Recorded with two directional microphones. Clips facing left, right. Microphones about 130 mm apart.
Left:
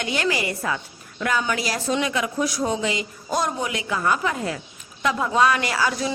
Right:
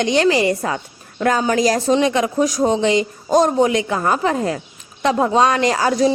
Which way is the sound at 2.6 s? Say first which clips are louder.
Right 8 dB; 30° right (ahead or behind).